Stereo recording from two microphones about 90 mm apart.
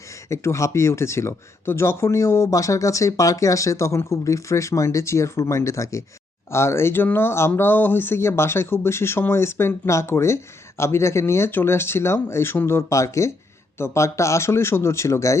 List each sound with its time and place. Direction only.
0.3 s speech: 35° left (ahead or behind)